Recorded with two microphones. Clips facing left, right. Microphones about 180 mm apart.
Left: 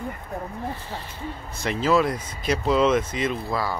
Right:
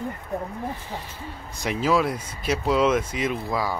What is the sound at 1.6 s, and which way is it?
Speech, 10° right (ahead or behind).